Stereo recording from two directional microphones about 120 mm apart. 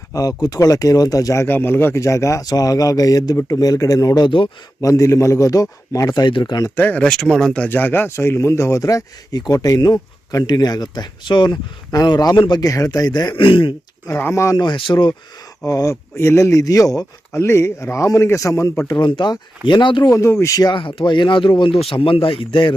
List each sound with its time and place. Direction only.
0.1 s speech: 30° left (ahead or behind)
4.8 s speech: 25° left (ahead or behind)
6.7 s speech: 15° left (ahead or behind); by 13.7 s 45° left (ahead or behind)
14.1 s speech: 20° left (ahead or behind)
14.6 s speech: 45° left (ahead or behind)
15.6 s speech: 30° left (ahead or behind)
18.9 s speech: 40° left (ahead or behind)
20.1 s speech: 25° left (ahead or behind)
20.7 s speech: 45° left (ahead or behind)